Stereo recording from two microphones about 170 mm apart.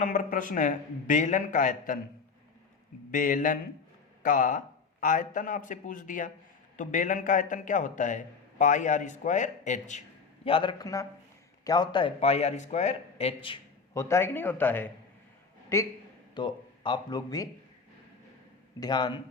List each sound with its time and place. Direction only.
0.0 s a man's voice: 50° left (ahead or behind)
3.1 s a man's voice: 55° left (ahead or behind)
10.4 s a man's voice: 30° left (ahead or behind)
13.9 s speech: 15° left (ahead or behind)
16.3 s speech: 25° left (ahead or behind)
18.8 s a man's voice: 25° left (ahead or behind)